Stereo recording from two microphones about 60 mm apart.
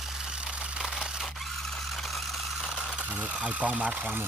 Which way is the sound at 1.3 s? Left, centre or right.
Centre.